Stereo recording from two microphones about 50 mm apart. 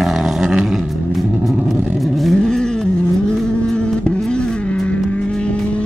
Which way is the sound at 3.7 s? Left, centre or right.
Left.